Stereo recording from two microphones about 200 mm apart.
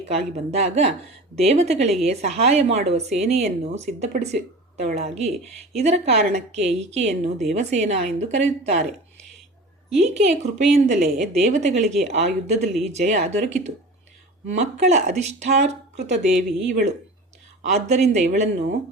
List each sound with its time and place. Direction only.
0.0 s speech: 35° right (ahead or behind)
10.2 s speech: 35° right (ahead or behind)
17.6 s speech: 35° right (ahead or behind)